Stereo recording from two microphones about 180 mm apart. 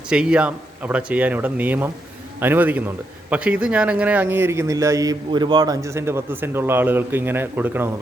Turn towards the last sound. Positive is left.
turn(degrees=-10)  # may be behind; listen again after turning